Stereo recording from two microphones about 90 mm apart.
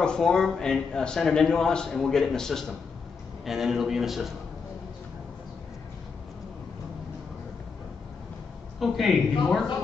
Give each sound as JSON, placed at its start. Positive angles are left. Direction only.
{"t": 0.0, "sound": "speech", "side_deg": 10}
{"t": 8.7, "sound": "speech", "side_deg": 0}